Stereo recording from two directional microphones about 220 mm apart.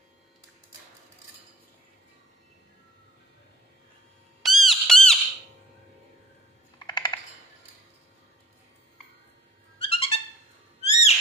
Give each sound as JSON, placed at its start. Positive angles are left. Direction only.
{"t": 4.4, "sound": "squeak", "side_deg": 0}
{"t": 6.7, "sound": "typing", "side_deg": 20}
{"t": 9.7, "sound": "music", "side_deg": 25}
{"t": 10.8, "sound": "owl", "side_deg": 30}